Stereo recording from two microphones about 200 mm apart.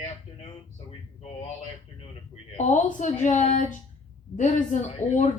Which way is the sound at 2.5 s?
35° left (ahead or behind).